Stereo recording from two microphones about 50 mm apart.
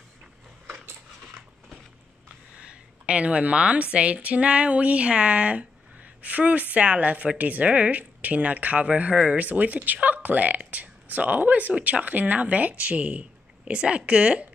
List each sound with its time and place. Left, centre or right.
2.5 s speech: right